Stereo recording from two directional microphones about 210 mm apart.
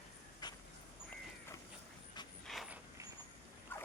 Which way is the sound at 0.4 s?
20° left (ahead or behind).